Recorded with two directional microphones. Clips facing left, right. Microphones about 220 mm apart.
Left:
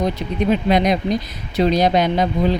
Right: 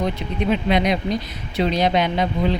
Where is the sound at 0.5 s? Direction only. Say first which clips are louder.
Left 2 dB; 45° left (ahead or behind).